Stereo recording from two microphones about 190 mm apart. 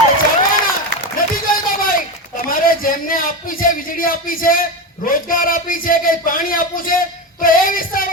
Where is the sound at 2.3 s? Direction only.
50° left (ahead or behind).